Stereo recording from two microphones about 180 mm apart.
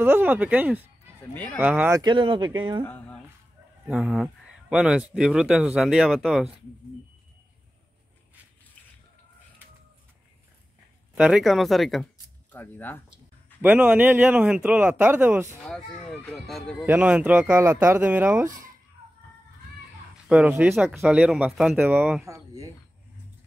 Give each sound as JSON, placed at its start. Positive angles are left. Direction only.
{"t": 0.0, "sound": "speech", "side_deg": -10}
{"t": 1.3, "sound": "speech", "side_deg": 10}
{"t": 1.6, "sound": "speech", "side_deg": -10}
{"t": 2.0, "sound": "speech", "side_deg": -25}
{"t": 3.8, "sound": "speech", "side_deg": -5}
{"t": 11.1, "sound": "speech", "side_deg": -5}
{"t": 13.6, "sound": "speech", "side_deg": -10}
{"t": 15.6, "sound": "speech", "side_deg": 5}
{"t": 20.2, "sound": "speech", "side_deg": -5}